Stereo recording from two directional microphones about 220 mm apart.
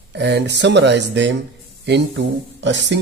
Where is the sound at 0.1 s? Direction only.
50° right (ahead or behind).